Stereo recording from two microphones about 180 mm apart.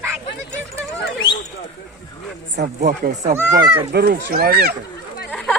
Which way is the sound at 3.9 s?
60° right (ahead or behind).